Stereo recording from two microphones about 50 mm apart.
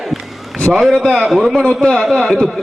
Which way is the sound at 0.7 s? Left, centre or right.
Centre.